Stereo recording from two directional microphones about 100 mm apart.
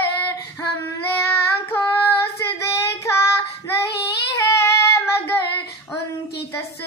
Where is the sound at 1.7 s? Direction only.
25° left (ahead or behind).